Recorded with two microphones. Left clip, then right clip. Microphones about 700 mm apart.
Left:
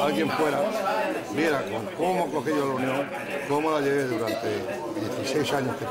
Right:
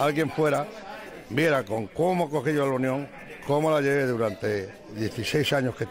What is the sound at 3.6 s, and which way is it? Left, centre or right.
Speech, right.